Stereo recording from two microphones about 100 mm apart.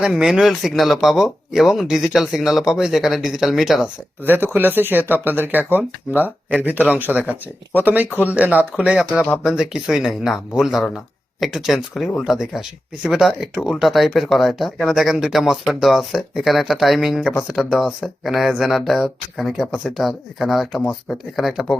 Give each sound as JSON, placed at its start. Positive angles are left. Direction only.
{"t": 0.0, "sound": "speech", "side_deg": -5}
{"t": 4.2, "sound": "speech", "side_deg": -20}